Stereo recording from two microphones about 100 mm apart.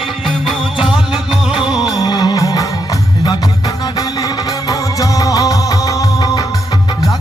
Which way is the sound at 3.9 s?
40° left (ahead or behind).